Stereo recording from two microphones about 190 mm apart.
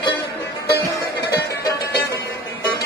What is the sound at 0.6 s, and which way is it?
Music, 55° left (ahead or behind).